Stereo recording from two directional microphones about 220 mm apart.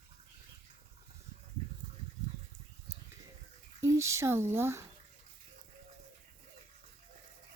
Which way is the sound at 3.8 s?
15° right (ahead or behind).